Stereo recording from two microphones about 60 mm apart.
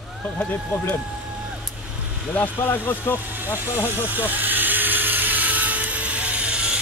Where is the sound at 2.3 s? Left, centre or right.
Left.